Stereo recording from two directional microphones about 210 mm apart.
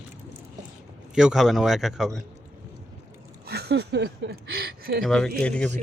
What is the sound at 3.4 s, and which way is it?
Speech, 50° right (ahead or behind).